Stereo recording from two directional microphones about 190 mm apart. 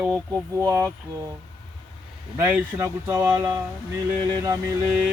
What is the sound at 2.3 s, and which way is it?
Speech, 10° right (ahead or behind).